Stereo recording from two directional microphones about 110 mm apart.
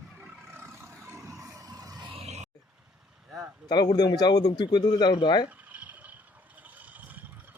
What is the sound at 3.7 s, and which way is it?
Speech, 35° left (ahead or behind).